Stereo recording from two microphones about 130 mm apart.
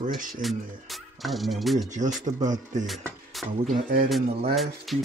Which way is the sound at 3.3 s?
Centre (ahead or behind).